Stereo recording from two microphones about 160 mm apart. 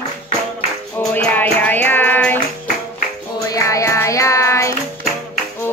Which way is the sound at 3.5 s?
20° left (ahead or behind).